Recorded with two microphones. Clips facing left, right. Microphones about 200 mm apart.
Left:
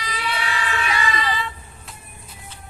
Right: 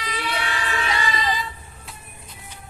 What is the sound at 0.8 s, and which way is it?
Vehicle, 30° right (ahead or behind).